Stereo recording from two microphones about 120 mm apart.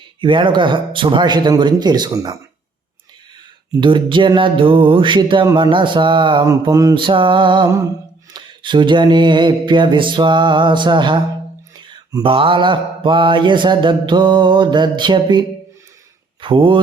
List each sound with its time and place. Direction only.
0.2 s mantra: 40° right (ahead or behind)
3.7 s a sound: 40° right (ahead or behind)
6.4 s mantra: 30° right (ahead or behind)
6.9 s a sound: 45° right (ahead or behind)
8.3 s mantra: 40° right (ahead or behind)
16.4 s speech: 45° right (ahead or behind)